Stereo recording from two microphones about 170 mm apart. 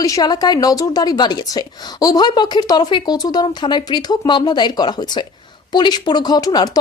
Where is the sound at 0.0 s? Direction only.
20° left (ahead or behind).